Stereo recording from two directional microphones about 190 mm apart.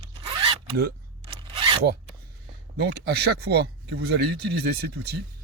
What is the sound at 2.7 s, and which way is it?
Speech, 60° right (ahead or behind).